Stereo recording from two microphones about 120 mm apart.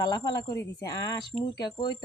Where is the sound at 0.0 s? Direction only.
35° left (ahead or behind).